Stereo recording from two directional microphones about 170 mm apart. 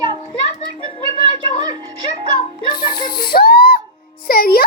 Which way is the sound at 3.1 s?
60° left (ahead or behind).